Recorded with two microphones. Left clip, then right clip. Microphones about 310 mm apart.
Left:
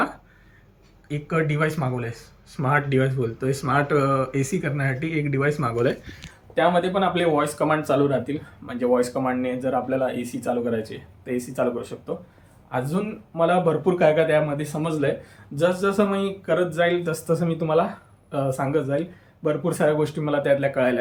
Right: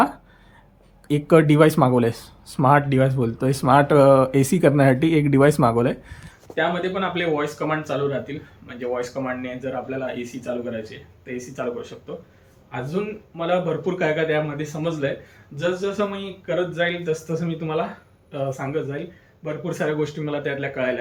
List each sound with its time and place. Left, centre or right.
1.0 s speech: centre
6.5 s speech: centre